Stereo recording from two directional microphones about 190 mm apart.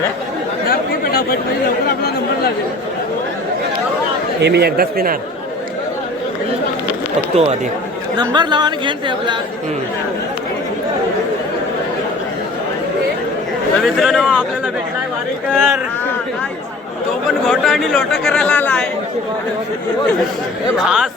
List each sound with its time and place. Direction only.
0.7 s speech: 50° left (ahead or behind)
4.4 s speech: 60° right (ahead or behind)
8.2 s speech: 25° right (ahead or behind)
13.8 s speech: centre (ahead or behind)
15.5 s speech: centre (ahead or behind)
17.5 s speech: centre (ahead or behind)
20.8 s speech: 5° right (ahead or behind)